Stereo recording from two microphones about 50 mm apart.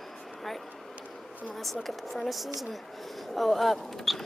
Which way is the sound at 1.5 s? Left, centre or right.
Centre.